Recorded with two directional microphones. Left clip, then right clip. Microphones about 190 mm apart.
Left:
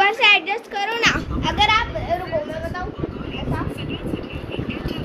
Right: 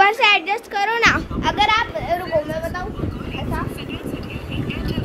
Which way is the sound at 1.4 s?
45° right (ahead or behind).